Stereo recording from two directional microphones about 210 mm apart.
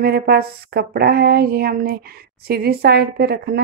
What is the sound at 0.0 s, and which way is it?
Speech, 45° right (ahead or behind).